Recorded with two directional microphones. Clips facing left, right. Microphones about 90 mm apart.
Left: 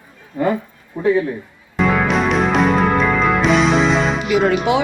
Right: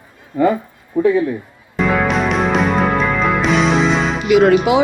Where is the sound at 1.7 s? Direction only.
Centre (ahead or behind).